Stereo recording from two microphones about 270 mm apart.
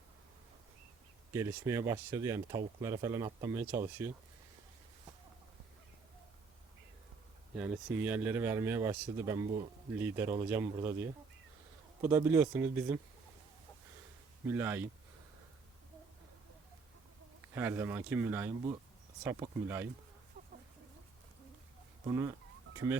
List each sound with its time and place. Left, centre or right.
1.3 s speech: centre
7.5 s speech: centre
14.4 s speech: centre
17.5 s speech: centre
20.4 s chicken: right
22.0 s speech: centre